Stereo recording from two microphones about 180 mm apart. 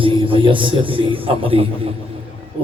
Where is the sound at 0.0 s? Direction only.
30° right (ahead or behind).